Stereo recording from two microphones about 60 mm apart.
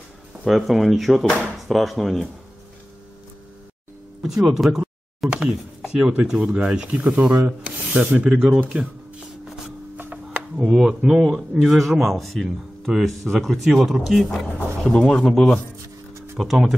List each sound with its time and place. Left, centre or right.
0.5 s a man's voice: centre
4.2 s a sound: centre
5.3 s chopping: centre
5.8 s a sound: centre
6.6 s a man's voice: centre
6.9 s speech: right
10.6 s a man's voice: centre
14.9 s speech: centre
16.3 s a man's voice: centre